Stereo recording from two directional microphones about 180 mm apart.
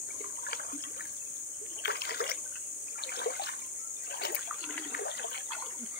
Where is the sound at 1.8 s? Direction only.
65° left (ahead or behind).